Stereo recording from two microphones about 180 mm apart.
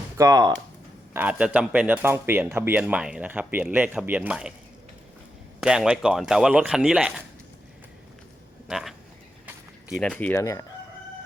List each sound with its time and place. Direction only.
0.2 s speech: 20° right (ahead or behind)
1.1 s speech: 10° right (ahead or behind)
5.5 s speech: 5° right (ahead or behind)
8.6 s a sound: centre (ahead or behind)
10.0 s speech: 5° left (ahead or behind)